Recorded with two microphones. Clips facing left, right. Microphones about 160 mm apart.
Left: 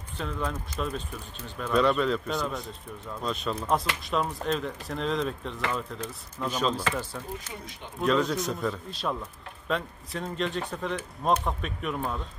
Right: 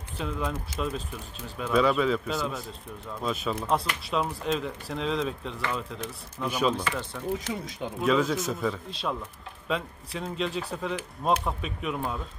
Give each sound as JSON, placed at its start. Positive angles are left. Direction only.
{"t": 0.2, "sound": "speech", "side_deg": -5}
{"t": 7.3, "sound": "speech", "side_deg": -90}
{"t": 8.0, "sound": "speech", "side_deg": 0}